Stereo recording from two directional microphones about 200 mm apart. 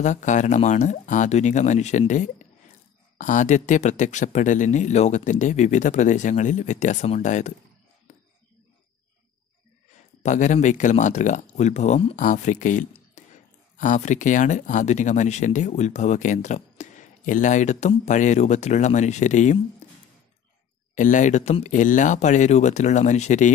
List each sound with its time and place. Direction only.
0.0 s speech: 40° left (ahead or behind)
10.2 s speech: 40° left (ahead or behind)
20.9 s speech: 40° left (ahead or behind)